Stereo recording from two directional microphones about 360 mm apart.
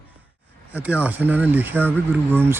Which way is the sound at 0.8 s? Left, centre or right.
Centre.